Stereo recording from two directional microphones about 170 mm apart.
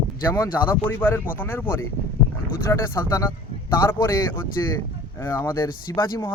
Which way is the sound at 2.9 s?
15° left (ahead or behind).